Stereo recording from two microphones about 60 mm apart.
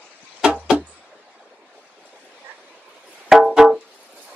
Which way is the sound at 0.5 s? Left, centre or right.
Right.